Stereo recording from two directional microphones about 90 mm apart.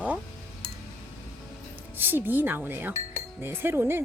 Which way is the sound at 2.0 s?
20° right (ahead or behind).